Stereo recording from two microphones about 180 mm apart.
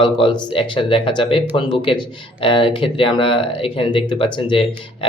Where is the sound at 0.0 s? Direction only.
25° left (ahead or behind).